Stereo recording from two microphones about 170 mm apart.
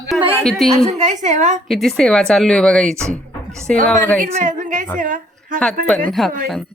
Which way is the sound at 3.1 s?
5° left (ahead or behind).